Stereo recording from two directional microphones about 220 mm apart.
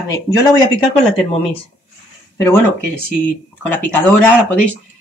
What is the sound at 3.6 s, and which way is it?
Speech, 5° left (ahead or behind).